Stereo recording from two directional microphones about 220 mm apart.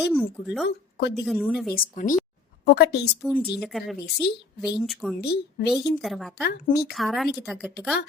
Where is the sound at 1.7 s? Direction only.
35° left (ahead or behind).